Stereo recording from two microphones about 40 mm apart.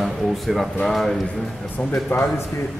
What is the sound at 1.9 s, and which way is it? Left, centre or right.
Speech, left.